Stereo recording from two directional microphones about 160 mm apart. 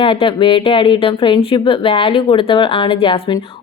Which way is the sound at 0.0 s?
35° left (ahead or behind).